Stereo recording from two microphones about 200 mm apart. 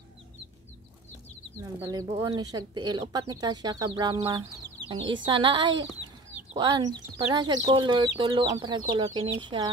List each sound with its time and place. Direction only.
1.6 s speech: 15° right (ahead or behind)